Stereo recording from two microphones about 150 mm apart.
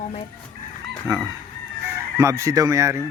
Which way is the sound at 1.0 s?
20° right (ahead or behind).